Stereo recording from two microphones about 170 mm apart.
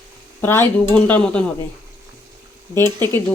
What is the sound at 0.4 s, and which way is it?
Speech, 15° left (ahead or behind).